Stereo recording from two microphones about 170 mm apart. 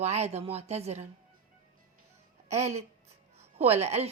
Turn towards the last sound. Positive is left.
turn(degrees=-40)  # may be behind; listen again after turning